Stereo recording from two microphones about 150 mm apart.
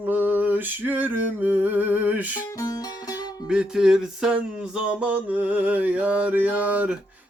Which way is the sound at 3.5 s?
5° right (ahead or behind).